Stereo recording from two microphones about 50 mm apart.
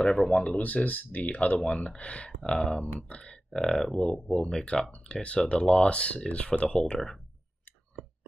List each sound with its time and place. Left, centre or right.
0.0 s speech: centre
0.6 s speech: left
2.5 s speech: centre
2.8 s speech: left
3.4 s speech: centre; by 6.7 s left
6.7 s speech: centre